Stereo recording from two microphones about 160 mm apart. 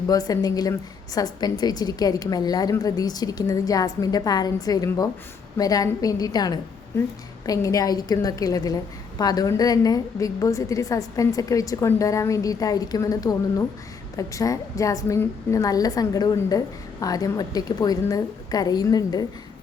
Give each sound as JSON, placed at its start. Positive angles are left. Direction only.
{"t": 0.1, "sound": "a woman's voice", "side_deg": 25}